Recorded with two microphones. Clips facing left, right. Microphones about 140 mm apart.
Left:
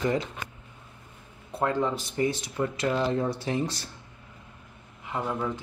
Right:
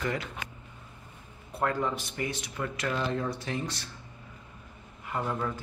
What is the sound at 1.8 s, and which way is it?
Speech, 30° left (ahead or behind).